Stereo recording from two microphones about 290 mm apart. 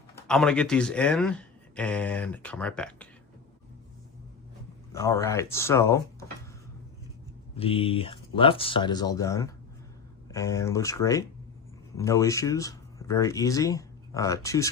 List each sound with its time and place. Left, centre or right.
0.3 s speech: centre
4.9 s speech: centre
7.5 s speech: centre